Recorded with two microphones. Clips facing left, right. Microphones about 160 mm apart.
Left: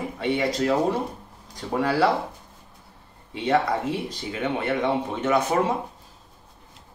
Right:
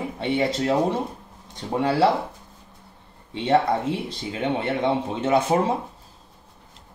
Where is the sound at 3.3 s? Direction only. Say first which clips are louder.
Right 2 dB; 30° right (ahead or behind).